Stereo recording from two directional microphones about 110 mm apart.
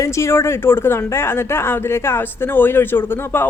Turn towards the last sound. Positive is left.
turn(degrees=20)  # may be behind; listen again after turning